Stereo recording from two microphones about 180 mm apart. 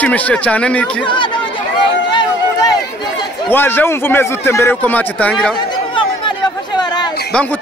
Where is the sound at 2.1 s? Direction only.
25° left (ahead or behind).